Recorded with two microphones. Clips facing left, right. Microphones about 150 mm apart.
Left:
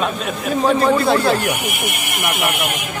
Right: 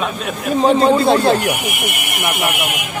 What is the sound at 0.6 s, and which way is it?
Speech, 25° right (ahead or behind).